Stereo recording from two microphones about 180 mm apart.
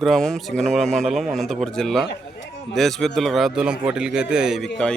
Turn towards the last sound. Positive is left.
turn(degrees=5)  # may be behind; listen again after turning